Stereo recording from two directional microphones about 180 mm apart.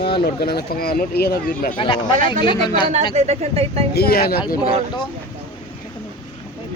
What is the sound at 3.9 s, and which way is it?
Speech, 60° left (ahead or behind).